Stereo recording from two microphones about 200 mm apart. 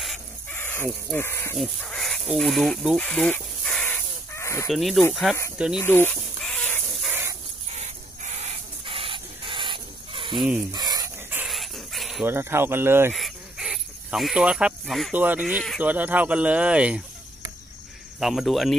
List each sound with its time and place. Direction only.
0.0 s chicken: centre (ahead or behind)
0.6 s speech: 10° left (ahead or behind)
1.6 s a sound: 5° left (ahead or behind)
4.6 s speech: centre (ahead or behind)
5.8 s a sound: 10° left (ahead or behind)
7.1 s dog: 10° right (ahead or behind)
7.7 s a sound: 35° right (ahead or behind)
10.7 s dog: 20° right (ahead or behind)
13.1 s cricket: centre (ahead or behind)
18.2 s speech: centre (ahead or behind)